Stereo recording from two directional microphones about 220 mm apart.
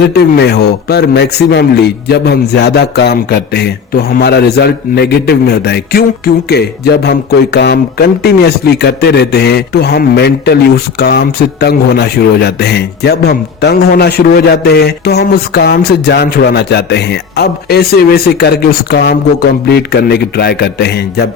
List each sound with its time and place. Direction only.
0.0 s a man's voice: 50° left (ahead or behind)